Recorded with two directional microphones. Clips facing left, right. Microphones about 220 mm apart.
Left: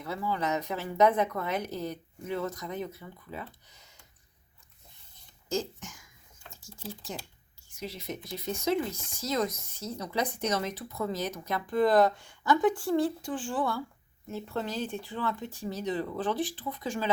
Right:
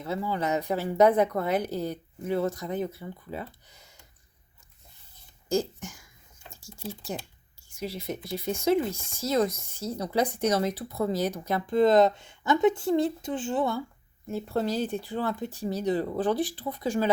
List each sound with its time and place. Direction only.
0.0 s a woman's voice: 25° right (ahead or behind)
5.5 s speech: 30° right (ahead or behind)
7.8 s a woman's voice: 30° right (ahead or behind)
14.3 s a woman's voice: 35° right (ahead or behind)